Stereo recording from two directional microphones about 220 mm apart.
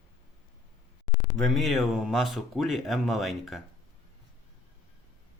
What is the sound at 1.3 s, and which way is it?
Speech, centre (ahead or behind).